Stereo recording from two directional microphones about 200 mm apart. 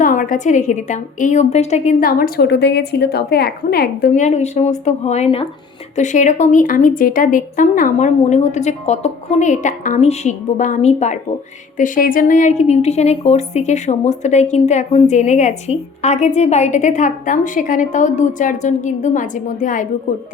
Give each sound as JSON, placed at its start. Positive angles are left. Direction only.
{"t": 0.0, "sound": "a woman's voice", "side_deg": 40}
{"t": 4.1, "sound": "a woman's voice", "side_deg": 35}